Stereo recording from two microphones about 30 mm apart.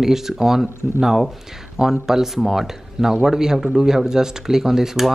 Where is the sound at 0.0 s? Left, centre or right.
Centre.